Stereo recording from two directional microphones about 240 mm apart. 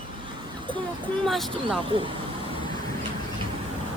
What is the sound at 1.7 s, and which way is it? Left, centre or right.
Speech, right.